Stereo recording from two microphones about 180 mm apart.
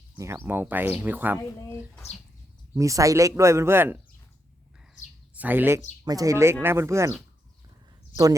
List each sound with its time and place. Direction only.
0.2 s speech: 15° right (ahead or behind)
2.7 s speech: 15° right (ahead or behind)
5.4 s speech: 10° right (ahead or behind)